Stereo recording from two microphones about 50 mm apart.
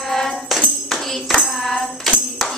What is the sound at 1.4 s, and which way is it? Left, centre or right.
Tambourine, centre.